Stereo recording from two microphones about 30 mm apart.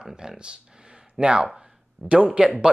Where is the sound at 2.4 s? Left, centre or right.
Centre.